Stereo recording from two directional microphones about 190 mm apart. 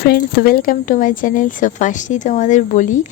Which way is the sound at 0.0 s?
50° left (ahead or behind).